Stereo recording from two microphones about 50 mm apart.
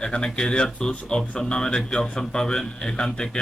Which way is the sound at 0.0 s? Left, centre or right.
Centre.